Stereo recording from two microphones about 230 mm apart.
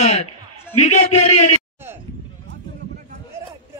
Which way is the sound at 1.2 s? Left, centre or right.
Left.